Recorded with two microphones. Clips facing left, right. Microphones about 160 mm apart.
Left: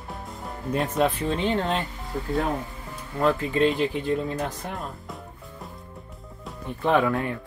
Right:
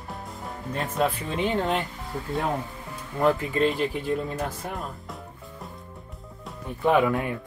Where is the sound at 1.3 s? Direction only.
10° right (ahead or behind).